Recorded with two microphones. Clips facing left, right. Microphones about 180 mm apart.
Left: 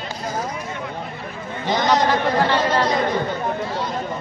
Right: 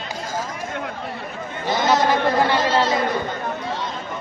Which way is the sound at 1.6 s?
15° left (ahead or behind).